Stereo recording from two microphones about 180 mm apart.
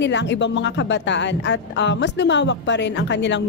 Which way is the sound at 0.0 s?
75° left (ahead or behind).